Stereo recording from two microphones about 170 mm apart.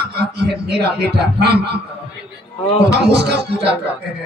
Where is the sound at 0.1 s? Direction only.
75° right (ahead or behind).